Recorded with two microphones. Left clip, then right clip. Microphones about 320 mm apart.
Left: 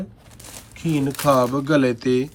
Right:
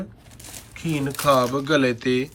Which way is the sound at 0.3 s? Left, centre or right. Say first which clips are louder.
Right 1 dB; centre.